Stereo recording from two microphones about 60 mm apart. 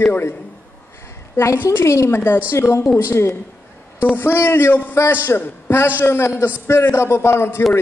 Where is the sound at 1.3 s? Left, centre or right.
Left.